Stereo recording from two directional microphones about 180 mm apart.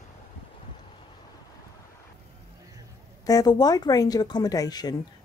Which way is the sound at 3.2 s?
20° left (ahead or behind).